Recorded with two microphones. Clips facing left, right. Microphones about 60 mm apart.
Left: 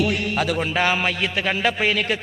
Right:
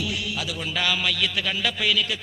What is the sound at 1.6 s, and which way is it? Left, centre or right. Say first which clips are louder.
Speech: left 3 dB; left.